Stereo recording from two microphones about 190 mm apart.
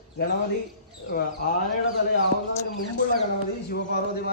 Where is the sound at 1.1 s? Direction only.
55° left (ahead or behind).